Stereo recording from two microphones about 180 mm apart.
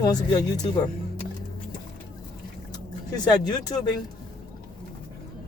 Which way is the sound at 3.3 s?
20° left (ahead or behind).